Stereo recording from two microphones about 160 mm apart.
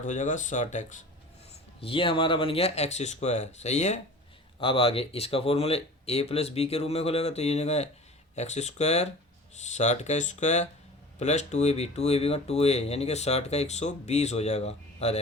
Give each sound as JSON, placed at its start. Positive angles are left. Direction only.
{"t": 0.0, "sound": "speech", "side_deg": 50}
{"t": 1.8, "sound": "speech", "side_deg": 35}
{"t": 4.6, "sound": "speech", "side_deg": 35}